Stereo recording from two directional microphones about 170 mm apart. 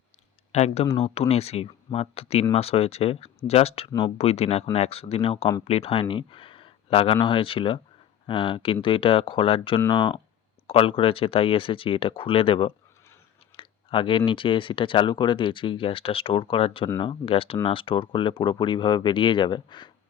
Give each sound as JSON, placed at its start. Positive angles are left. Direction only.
{"t": 0.5, "sound": "speech", "side_deg": 40}